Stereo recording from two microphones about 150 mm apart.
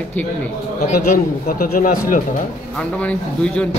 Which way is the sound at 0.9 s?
80° left.